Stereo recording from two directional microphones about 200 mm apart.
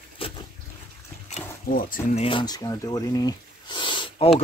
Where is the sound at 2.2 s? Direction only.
25° left (ahead or behind).